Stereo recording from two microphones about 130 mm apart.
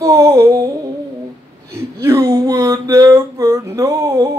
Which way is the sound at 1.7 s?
20° right (ahead or behind).